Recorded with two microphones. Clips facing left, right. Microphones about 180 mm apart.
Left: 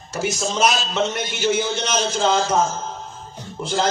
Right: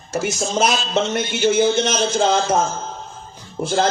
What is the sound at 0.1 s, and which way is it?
A man's voice, 50° right (ahead or behind).